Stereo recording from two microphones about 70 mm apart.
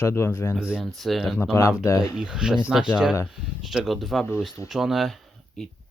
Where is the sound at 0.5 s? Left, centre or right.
Centre.